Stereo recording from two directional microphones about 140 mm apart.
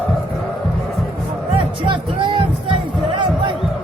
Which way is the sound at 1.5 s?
35° right (ahead or behind).